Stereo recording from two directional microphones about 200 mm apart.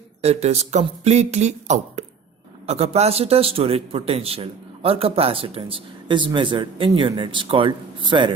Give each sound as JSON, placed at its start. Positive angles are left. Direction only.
{"t": 0.2, "sound": "a man's voice", "side_deg": -35}